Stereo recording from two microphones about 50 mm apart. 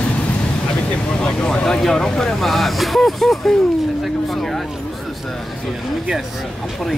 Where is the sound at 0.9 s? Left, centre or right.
Centre.